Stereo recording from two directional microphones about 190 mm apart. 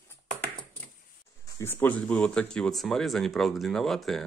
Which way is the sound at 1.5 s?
10° left (ahead or behind).